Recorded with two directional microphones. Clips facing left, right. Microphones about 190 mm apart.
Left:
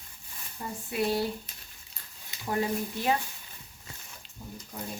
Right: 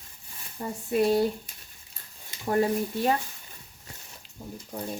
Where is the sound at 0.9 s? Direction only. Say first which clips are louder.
Right 6 dB; 45° right (ahead or behind).